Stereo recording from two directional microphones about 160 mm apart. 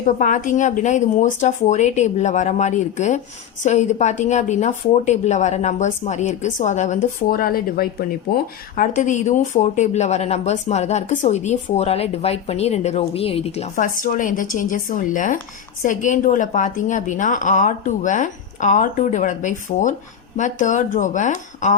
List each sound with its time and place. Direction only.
0.2 s a woman's voice: 55° left (ahead or behind)
7.3 s speech: 65° left (ahead or behind)
8.7 s a woman's voice: 55° left (ahead or behind); by 13.7 s 40° left (ahead or behind)
13.7 s a woman's voice: 60° left (ahead or behind)